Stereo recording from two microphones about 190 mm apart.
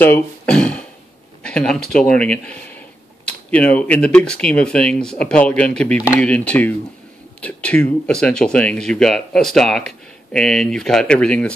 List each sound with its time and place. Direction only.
0.0 s speech: 5° left (ahead or behind)